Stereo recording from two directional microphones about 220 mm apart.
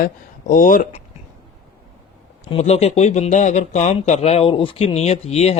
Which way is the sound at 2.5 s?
30° left (ahead or behind).